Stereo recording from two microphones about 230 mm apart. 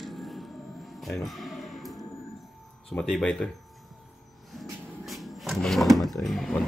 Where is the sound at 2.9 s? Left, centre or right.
Centre.